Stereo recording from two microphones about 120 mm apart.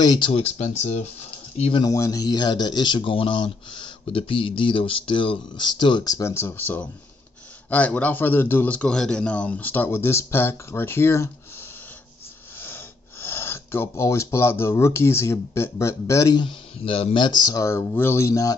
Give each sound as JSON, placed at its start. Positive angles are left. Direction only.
{"t": 0.0, "sound": "speech", "side_deg": 35}
{"t": 0.3, "sound": "speech", "side_deg": 65}
{"t": 1.8, "sound": "a man's voice", "side_deg": 30}
{"t": 12.5, "sound": "speech", "side_deg": 20}
{"t": 16.4, "sound": "speech", "side_deg": 50}